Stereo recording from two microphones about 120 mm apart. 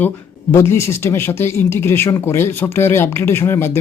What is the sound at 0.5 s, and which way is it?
Speech, 20° left (ahead or behind).